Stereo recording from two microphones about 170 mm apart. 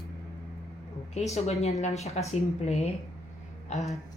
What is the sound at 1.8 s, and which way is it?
Speech, 40° left (ahead or behind).